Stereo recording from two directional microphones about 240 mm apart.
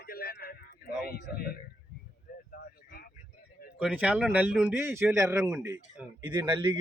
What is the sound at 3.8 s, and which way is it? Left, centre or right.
Speech, centre.